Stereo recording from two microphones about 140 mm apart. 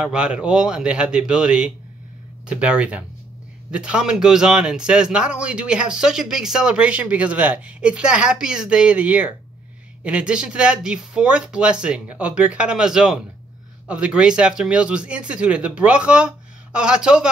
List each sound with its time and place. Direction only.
0.0 s a man's voice: 5° right (ahead or behind)